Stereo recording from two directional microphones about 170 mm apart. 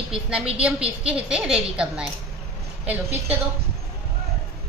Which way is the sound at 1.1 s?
5° right (ahead or behind).